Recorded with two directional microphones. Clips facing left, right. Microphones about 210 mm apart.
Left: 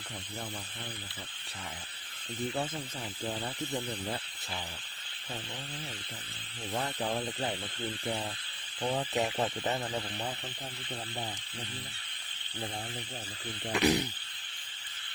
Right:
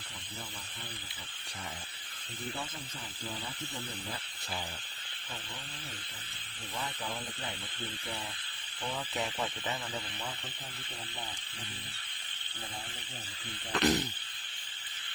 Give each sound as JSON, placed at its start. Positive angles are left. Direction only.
{"t": 3.2, "sound": "speech", "side_deg": 45}
{"t": 6.7, "sound": "speech", "side_deg": 45}
{"t": 8.8, "sound": "speech", "side_deg": 40}
{"t": 13.7, "sound": "speech", "side_deg": 10}